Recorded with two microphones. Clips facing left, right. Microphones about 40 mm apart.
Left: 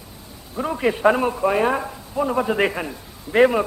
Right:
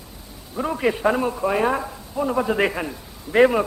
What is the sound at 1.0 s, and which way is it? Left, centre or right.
A man's voice, centre.